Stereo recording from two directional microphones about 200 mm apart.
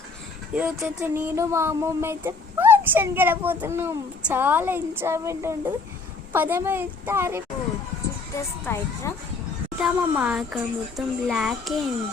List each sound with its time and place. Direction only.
0.5 s a sound: 5° right (ahead or behind)
8.6 s speech: 15° left (ahead or behind)
9.7 s a child's voice: 5° right (ahead or behind)